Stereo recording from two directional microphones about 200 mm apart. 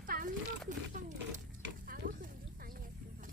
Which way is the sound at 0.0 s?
45° right (ahead or behind).